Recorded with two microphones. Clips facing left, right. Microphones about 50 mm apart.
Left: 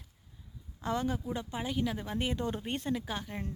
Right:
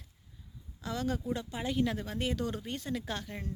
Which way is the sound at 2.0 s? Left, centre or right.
Left.